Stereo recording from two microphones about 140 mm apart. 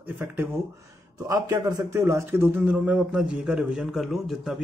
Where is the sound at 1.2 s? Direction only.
20° right (ahead or behind).